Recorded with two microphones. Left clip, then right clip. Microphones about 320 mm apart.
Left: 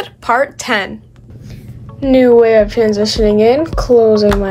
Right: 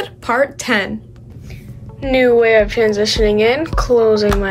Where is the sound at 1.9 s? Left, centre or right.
Centre.